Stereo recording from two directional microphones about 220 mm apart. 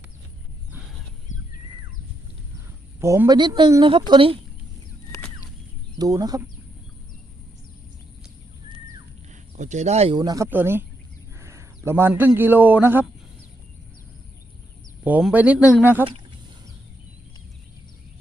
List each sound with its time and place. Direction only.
1.3 s a sound: 35° left (ahead or behind)
3.0 s a woman's voice: 15° right (ahead or behind)
6.0 s speech: 15° right (ahead or behind)
9.3 s a man's voice: 35° right (ahead or behind); by 13.1 s 10° right (ahead or behind)
15.0 s speech: 5° right (ahead or behind)